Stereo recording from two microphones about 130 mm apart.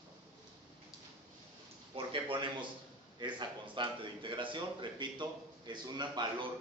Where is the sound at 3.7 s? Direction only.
40° right (ahead or behind).